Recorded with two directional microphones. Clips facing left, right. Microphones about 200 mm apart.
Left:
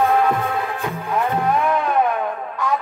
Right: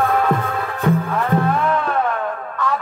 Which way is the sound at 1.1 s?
15° left (ahead or behind).